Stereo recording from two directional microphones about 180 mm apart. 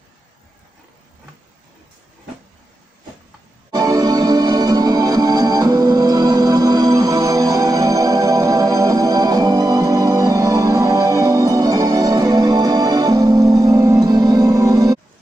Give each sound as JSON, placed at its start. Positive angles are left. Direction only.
{"t": 3.7, "sound": "music", "side_deg": -20}